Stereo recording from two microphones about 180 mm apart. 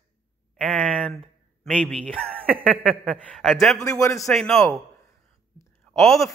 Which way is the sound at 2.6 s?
5° right (ahead or behind).